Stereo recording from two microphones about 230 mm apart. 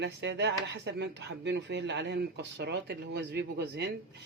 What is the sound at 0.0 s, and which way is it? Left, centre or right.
Speech, right.